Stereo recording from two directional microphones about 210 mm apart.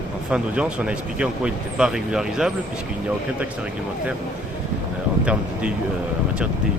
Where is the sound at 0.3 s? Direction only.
5° right (ahead or behind).